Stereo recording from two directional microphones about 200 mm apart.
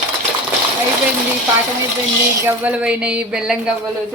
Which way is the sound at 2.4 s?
5° right (ahead or behind).